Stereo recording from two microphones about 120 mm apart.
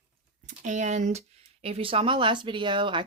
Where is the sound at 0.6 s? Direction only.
90° right.